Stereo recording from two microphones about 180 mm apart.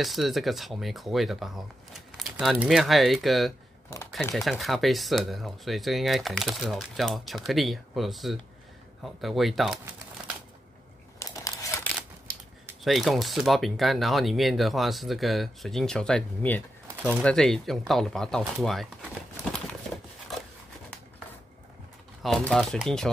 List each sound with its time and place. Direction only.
0.0 s speech: centre (ahead or behind)
11.1 s crumpling: 20° left (ahead or behind)
12.8 s speech: centre (ahead or behind)
22.2 s speech: centre (ahead or behind)